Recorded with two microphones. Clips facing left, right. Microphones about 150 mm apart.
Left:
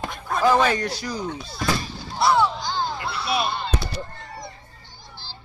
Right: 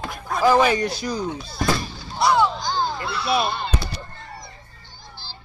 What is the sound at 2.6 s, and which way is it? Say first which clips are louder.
Speech: right 2 dB; 40° right (ahead or behind).